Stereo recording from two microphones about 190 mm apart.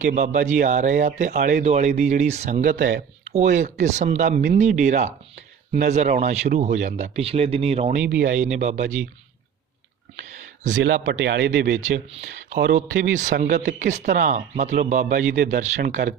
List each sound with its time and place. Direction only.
0.0 s speech: 40° right (ahead or behind)
10.8 s speech: 70° right (ahead or behind)
11.7 s speech: 40° right (ahead or behind)
12.5 s speech: 65° right (ahead or behind)
13.8 s speech: 40° right (ahead or behind)